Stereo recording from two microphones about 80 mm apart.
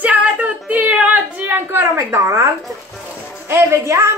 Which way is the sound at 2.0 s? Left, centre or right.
Right.